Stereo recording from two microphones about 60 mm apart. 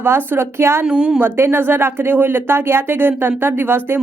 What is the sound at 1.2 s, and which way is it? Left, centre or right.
A woman's voice, right.